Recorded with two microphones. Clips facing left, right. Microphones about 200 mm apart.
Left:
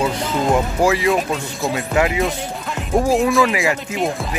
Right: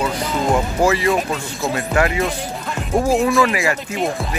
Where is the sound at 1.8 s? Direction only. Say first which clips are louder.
Even; 15° left (ahead or behind).